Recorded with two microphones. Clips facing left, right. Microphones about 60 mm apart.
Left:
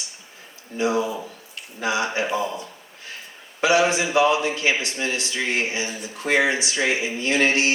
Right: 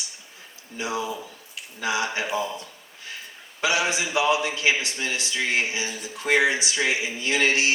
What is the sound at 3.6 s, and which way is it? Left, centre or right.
A man's voice, left.